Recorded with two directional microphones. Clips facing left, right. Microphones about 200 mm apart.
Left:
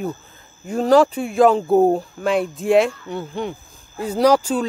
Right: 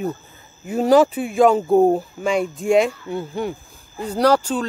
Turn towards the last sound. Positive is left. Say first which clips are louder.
# left 1 dB
turn(degrees=10)  # may be behind; listen again after turning